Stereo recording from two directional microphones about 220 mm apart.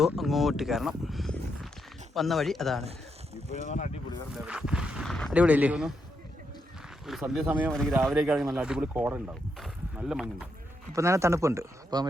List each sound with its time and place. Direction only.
0.0 s speech: centre (ahead or behind)
3.7 s speech: 35° left (ahead or behind)
4.4 s speech: 5° right (ahead or behind)
7.1 s speech: centre (ahead or behind)